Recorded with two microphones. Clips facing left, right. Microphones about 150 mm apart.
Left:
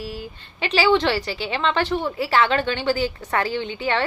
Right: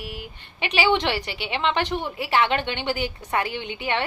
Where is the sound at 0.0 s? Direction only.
15° right (ahead or behind).